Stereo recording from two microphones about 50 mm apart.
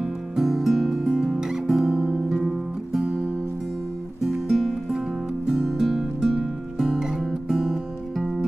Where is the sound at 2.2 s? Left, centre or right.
Centre.